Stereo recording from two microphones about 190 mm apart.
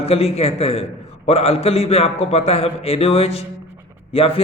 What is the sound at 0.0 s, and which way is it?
A man's voice, 30° left (ahead or behind).